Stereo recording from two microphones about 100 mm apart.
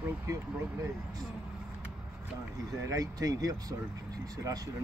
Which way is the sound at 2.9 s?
40° right (ahead or behind).